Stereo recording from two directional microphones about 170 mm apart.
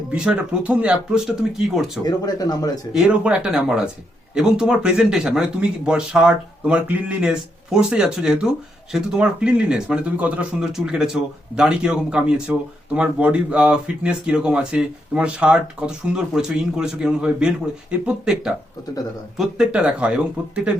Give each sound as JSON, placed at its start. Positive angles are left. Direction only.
{"t": 0.1, "sound": "speech", "side_deg": -5}
{"t": 2.0, "sound": "speech", "side_deg": 20}
{"t": 2.9, "sound": "speech", "side_deg": -5}